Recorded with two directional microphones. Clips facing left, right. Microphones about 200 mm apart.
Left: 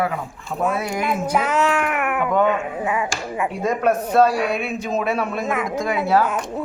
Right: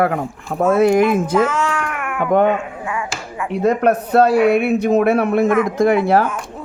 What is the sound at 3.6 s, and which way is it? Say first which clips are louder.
A man's voice: right 5 dB; 60° right (ahead or behind).